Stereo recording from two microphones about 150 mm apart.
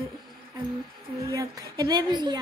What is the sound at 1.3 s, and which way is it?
Speech, 25° right (ahead or behind).